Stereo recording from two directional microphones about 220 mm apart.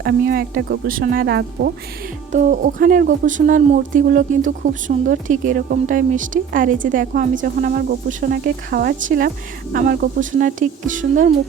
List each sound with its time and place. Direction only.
0.0 s speech: 45° right (ahead or behind)
2.3 s speech: 35° right (ahead or behind)